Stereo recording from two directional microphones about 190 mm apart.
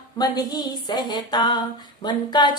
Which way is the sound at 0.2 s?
20° left (ahead or behind).